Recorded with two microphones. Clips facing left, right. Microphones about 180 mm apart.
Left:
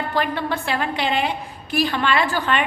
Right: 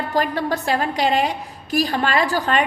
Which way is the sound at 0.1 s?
40° right (ahead or behind).